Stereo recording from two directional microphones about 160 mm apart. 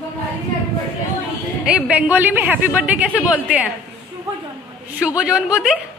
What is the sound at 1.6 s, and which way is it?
A woman's voice, 5° right (ahead or behind).